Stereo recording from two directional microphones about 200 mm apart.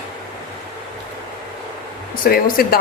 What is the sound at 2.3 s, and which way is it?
Speech, 45° left (ahead or behind).